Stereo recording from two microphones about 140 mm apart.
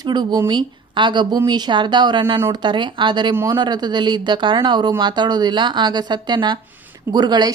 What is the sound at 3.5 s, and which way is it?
A woman's voice, 30° right (ahead or behind).